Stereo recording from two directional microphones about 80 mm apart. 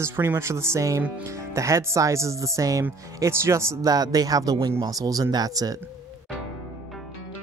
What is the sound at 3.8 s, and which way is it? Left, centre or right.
Speech, right.